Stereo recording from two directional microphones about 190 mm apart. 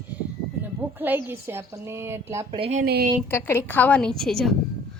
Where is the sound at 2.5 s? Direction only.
35° right (ahead or behind).